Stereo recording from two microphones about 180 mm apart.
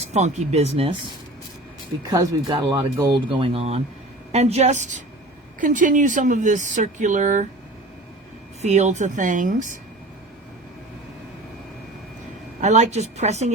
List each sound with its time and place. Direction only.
0.0 s speech: 40° right (ahead or behind)
2.0 s speech: 20° right (ahead or behind); by 7.4 s 45° right (ahead or behind)
8.6 s speech: 40° right (ahead or behind)
12.6 s speech: 40° right (ahead or behind)